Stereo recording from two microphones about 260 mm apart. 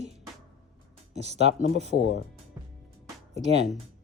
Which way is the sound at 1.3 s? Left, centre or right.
Right.